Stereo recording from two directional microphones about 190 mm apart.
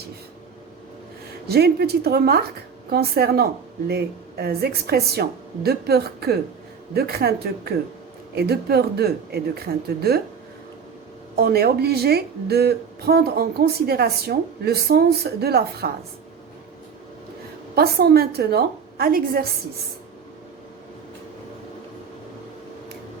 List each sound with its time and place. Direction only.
1.5 s a woman's voice: 55° right (ahead or behind)
11.3 s a woman's voice: 55° right (ahead or behind)
17.7 s a woman's voice: 55° right (ahead or behind)